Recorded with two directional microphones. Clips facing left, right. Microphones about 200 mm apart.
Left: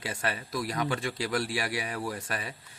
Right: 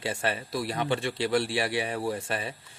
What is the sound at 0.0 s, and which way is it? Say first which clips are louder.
A man's voice: right 4 dB; 30° right (ahead or behind).